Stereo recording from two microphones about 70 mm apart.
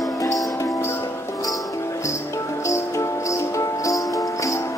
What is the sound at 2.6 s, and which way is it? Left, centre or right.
Music, left.